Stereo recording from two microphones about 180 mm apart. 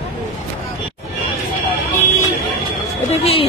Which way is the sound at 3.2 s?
35° left (ahead or behind).